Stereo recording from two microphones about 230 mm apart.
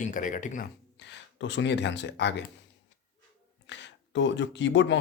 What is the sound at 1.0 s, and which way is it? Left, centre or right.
Speech, left.